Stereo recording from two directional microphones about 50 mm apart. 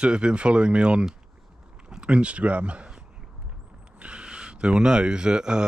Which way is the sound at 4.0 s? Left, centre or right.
Right.